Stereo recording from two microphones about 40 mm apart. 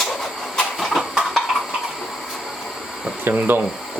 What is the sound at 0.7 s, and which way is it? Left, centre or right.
Train, centre.